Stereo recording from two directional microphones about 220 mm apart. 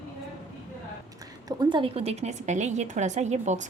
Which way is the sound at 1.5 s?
20° right (ahead or behind).